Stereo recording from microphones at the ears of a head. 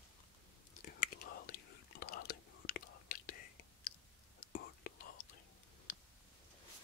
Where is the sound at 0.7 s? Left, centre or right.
Left.